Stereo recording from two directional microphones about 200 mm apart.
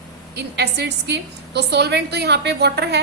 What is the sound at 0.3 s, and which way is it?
A woman's voice, 55° right (ahead or behind).